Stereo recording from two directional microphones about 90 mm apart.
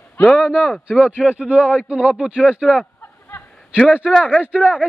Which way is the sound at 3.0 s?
20° left (ahead or behind).